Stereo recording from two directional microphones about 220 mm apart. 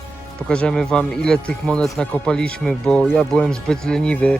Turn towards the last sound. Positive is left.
turn(degrees=5)  # may be behind; listen again after turning